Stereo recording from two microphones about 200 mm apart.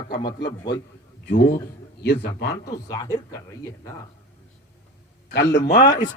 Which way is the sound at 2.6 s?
15° left (ahead or behind).